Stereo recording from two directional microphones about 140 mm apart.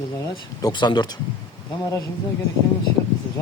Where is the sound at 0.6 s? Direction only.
30° left (ahead or behind).